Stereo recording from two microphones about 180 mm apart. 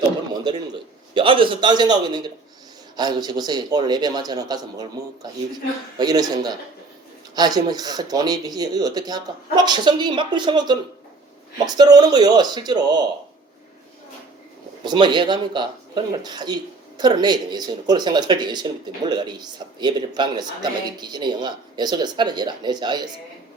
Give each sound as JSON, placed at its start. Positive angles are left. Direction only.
{"t": 1.1, "sound": "speech", "side_deg": -30}
{"t": 14.8, "sound": "speech", "side_deg": -25}